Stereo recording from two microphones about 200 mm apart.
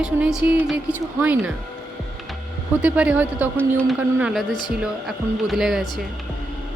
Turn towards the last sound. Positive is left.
turn(degrees=0)  # may be behind; listen again after turning